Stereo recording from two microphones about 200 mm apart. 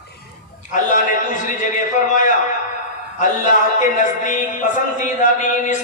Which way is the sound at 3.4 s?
40° left (ahead or behind).